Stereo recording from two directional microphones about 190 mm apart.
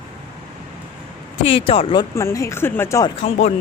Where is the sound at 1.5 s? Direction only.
30° left (ahead or behind).